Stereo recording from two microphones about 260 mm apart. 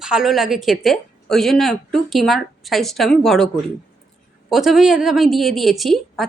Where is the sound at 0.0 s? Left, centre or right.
Centre.